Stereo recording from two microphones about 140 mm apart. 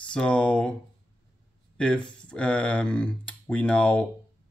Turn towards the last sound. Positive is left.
turn(degrees=10)  # may be behind; listen again after turning